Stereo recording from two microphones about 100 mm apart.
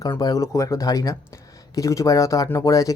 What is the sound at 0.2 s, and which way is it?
Speech, 35° left (ahead or behind).